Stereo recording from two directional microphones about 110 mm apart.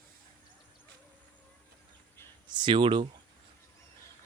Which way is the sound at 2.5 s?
45° right (ahead or behind).